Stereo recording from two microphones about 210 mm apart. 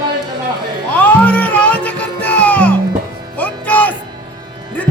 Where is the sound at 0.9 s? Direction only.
5° left (ahead or behind).